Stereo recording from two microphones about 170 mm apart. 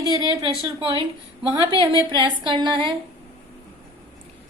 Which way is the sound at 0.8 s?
30° right (ahead or behind).